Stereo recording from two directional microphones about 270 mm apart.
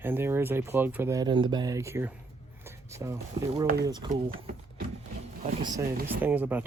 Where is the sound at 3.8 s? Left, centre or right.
Centre.